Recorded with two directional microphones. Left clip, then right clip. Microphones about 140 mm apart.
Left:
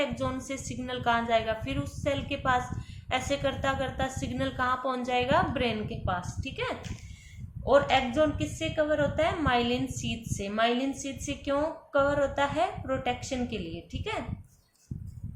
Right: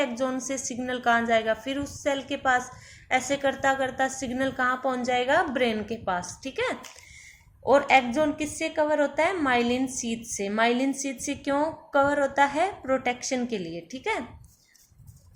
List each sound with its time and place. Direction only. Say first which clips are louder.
0.7 s a woman's voice: right 4 dB; 35° right (ahead or behind)